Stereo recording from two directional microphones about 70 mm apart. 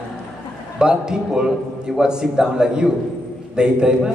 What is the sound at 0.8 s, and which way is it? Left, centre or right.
A man's voice, centre.